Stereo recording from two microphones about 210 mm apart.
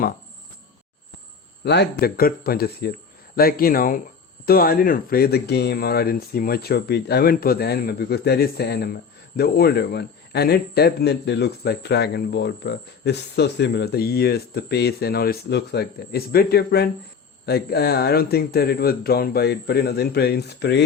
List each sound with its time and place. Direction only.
1.6 s speech: 50° left (ahead or behind)